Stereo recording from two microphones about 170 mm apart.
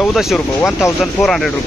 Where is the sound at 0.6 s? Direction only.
15° left (ahead or behind).